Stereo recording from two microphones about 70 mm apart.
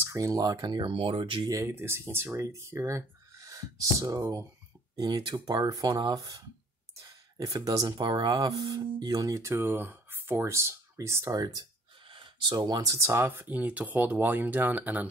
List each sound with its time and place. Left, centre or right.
0.1 s speech: right
1.5 s speech: right
4.9 s speech: right
9.3 s speech: right
11.3 s speech: right
12.4 s speech: right
12.9 s speech: right
13.6 s speech: right